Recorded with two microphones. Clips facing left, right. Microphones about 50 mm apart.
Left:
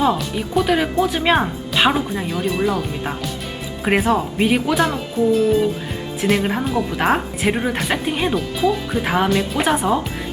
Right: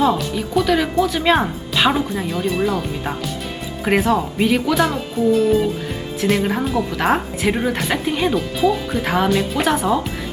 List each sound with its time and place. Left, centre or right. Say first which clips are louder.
0.0 s a woman's voice: right 1 dB; centre
0.6 s speech: even; centre
1.4 s a woman's voice: even; centre
4.7 s a woman's voice: right 1 dB; centre